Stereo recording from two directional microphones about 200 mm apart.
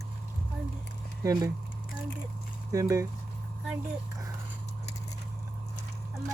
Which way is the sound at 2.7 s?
15° right (ahead or behind).